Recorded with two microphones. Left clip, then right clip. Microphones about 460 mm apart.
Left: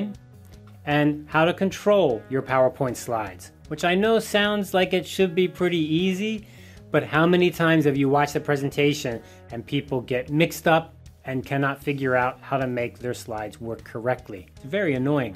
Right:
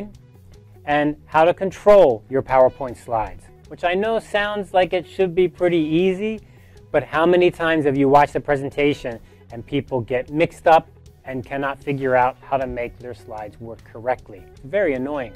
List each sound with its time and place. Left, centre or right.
0.8 s speech: right
2.3 s speech: right
9.9 s speech: right